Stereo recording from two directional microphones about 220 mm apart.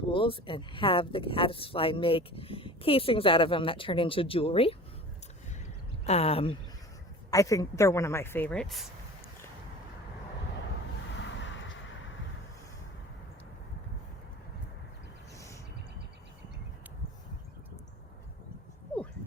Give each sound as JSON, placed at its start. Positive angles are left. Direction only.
{"t": 0.1, "sound": "speech", "side_deg": 25}
{"t": 6.1, "sound": "speech", "side_deg": 30}
{"t": 7.3, "sound": "speech", "side_deg": 15}
{"t": 11.2, "sound": "a sound", "side_deg": 55}